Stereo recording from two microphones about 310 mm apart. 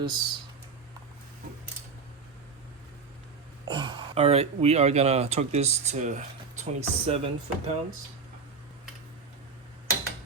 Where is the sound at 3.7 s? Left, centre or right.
Centre.